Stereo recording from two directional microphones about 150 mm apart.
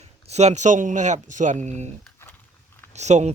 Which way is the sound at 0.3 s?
45° right (ahead or behind).